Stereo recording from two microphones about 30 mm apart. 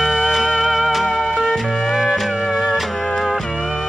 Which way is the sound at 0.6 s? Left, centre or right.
Centre.